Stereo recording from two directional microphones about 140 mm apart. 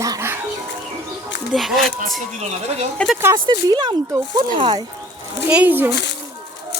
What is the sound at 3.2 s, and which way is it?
Speech, 25° right (ahead or behind).